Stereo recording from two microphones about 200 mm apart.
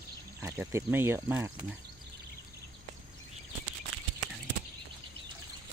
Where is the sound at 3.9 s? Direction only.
90° right.